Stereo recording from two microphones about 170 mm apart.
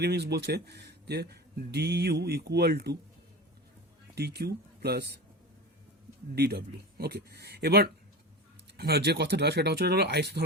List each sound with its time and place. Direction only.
0.0 s speech: 75° right (ahead or behind)
4.1 s speech: 75° right (ahead or behind)
6.3 s speech: 70° right (ahead or behind)